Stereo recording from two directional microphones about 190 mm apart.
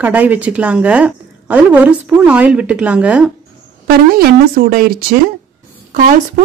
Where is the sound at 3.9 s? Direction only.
50° right (ahead or behind).